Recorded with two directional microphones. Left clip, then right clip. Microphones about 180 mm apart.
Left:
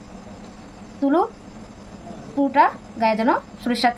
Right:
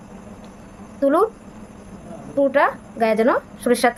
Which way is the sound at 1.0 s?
55° right (ahead or behind).